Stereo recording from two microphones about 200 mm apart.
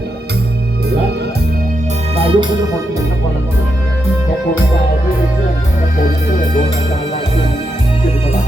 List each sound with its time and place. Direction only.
2.1 s music: 30° right (ahead or behind)